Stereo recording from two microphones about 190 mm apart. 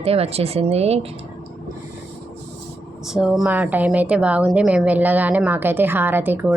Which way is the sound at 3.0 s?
Centre (ahead or behind).